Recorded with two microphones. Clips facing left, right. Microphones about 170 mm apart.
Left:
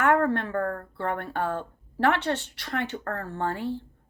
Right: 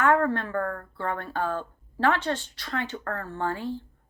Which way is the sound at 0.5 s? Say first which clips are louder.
Left 1 dB; 30° left (ahead or behind).